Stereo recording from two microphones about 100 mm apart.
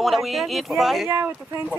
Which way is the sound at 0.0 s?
Centre (ahead or behind).